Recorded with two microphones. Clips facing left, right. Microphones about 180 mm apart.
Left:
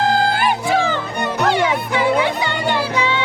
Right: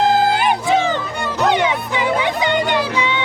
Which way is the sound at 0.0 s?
20° right (ahead or behind).